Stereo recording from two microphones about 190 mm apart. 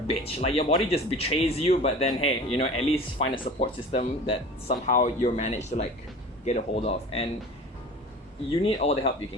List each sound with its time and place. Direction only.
0.1 s speech: 30° left (ahead or behind)
8.4 s speech: 30° left (ahead or behind)